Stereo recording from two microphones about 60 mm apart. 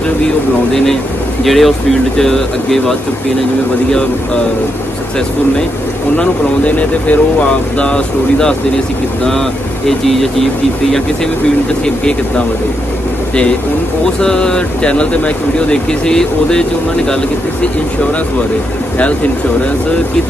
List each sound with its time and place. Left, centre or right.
1.4 s speech: centre
6.1 s speech: left
9.8 s speech: centre
14.2 s speech: centre